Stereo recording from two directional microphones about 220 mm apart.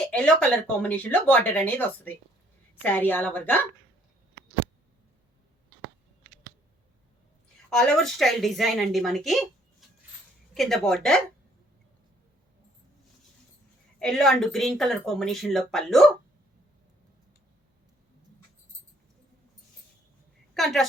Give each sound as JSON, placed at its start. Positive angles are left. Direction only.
{"t": 0.0, "sound": "speech", "side_deg": 5}
{"t": 7.7, "sound": "speech", "side_deg": 0}
{"t": 10.5, "sound": "speech", "side_deg": 0}
{"t": 14.0, "sound": "speech", "side_deg": 0}
{"t": 20.5, "sound": "a sound", "side_deg": 0}